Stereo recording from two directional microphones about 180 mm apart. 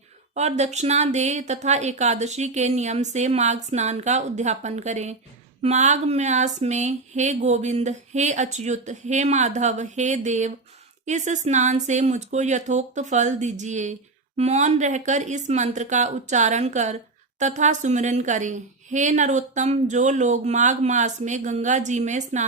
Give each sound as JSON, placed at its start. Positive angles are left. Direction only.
{"t": 0.3, "sound": "a woman's voice", "side_deg": -40}